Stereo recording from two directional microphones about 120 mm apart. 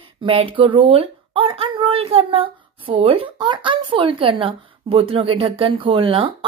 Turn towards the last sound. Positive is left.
turn(degrees=-50)  # may be behind; listen again after turning